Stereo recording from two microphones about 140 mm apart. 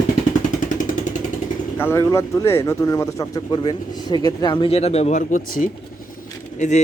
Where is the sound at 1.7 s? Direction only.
15° left (ahead or behind).